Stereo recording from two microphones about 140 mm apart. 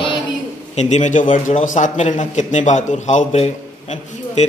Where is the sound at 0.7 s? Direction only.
55° left (ahead or behind).